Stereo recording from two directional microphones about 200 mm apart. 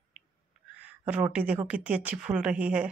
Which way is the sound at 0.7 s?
5° right (ahead or behind).